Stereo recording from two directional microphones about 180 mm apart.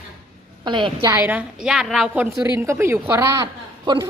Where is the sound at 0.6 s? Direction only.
25° right (ahead or behind).